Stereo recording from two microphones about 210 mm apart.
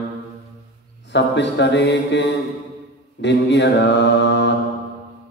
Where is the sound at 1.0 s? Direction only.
55° left (ahead or behind).